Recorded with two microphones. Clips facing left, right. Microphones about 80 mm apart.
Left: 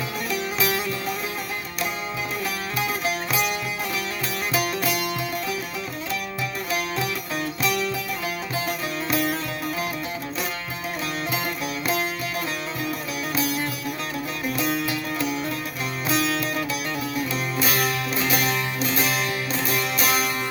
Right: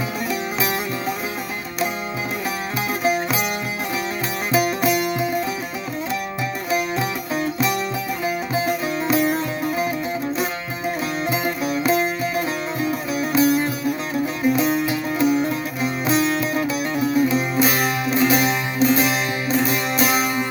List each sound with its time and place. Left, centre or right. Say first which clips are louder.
0.3 s music: even; right
3.0 s music: right 4 dB; right
4.5 s music: right 7 dB; right
6.7 s music: right 5 dB; right
8.2 s music: right 6 dB; right
11.3 s music: right 5 dB; right